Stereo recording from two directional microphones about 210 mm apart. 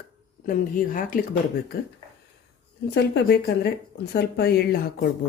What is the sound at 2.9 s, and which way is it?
Speech, 50° left (ahead or behind).